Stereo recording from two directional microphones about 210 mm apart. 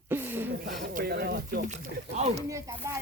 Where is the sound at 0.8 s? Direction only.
45° right (ahead or behind).